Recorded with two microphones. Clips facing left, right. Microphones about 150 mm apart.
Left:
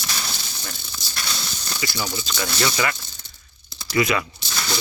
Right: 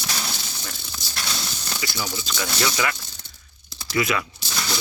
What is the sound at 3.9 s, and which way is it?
Speech, 5° right (ahead or behind).